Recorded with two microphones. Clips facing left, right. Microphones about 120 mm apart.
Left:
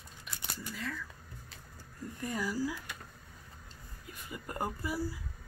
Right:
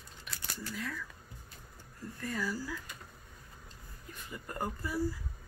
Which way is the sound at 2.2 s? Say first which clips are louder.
Left 3 dB; 15° left (ahead or behind).